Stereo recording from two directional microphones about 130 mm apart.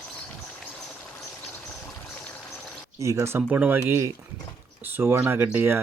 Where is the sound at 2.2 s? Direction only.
10° left (ahead or behind).